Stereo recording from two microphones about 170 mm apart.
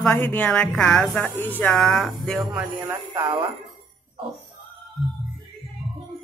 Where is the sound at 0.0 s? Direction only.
10° left (ahead or behind).